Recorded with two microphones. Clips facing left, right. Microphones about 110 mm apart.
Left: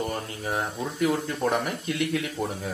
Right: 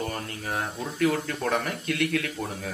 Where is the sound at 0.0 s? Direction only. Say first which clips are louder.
Left 2 dB; 20° left (ahead or behind).